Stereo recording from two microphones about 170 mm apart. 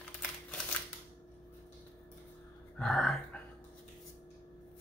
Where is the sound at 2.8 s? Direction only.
5° left (ahead or behind).